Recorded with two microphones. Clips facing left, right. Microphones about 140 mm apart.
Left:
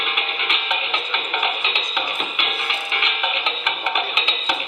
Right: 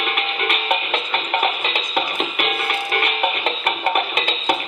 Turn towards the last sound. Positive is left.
turn(degrees=-50)  # may be behind; listen again after turning